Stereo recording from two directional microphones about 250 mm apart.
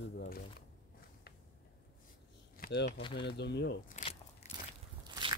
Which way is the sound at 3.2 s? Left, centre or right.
Left.